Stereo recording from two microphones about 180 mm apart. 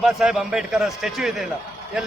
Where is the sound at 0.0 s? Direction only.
5° right (ahead or behind).